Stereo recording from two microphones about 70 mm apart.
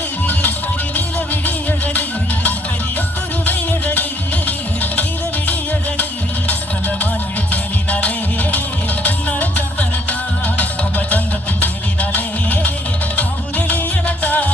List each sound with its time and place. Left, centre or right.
0.9 s music: left
6.5 s music: left